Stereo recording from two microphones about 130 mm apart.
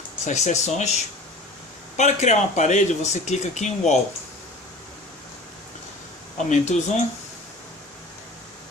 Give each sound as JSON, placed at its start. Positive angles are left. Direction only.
{"t": 0.3, "sound": "speech", "side_deg": 65}
{"t": 2.0, "sound": "speech", "side_deg": 65}
{"t": 6.3, "sound": "speech", "side_deg": 65}